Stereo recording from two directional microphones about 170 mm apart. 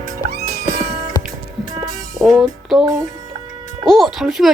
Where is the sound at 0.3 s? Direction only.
65° right (ahead or behind).